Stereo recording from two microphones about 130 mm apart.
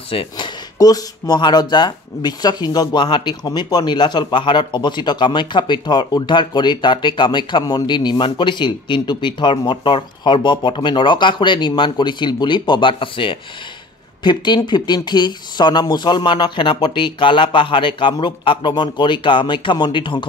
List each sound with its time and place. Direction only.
0.1 s speech: 45° left (ahead or behind)
0.7 s speech: 30° left (ahead or behind)